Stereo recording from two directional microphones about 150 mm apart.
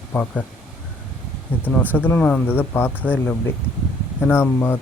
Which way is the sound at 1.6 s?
10° left (ahead or behind).